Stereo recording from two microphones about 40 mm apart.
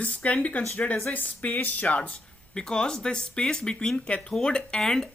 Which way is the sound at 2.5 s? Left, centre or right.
Centre.